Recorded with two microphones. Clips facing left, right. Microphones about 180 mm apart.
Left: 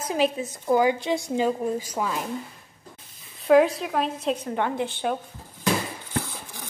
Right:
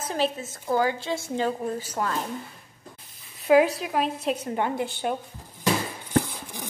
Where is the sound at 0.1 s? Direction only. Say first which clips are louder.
Left 3 dB; 15° left (ahead or behind).